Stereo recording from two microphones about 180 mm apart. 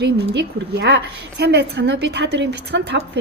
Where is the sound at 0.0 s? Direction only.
70° right (ahead or behind).